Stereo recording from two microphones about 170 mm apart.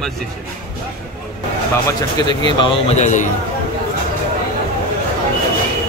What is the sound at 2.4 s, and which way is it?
Speech, 30° left (ahead or behind).